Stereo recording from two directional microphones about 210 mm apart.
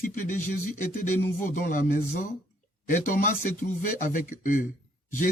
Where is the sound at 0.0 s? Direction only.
40° left (ahead or behind).